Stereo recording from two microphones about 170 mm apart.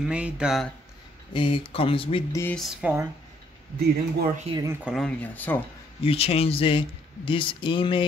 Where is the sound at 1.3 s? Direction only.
30° left (ahead or behind).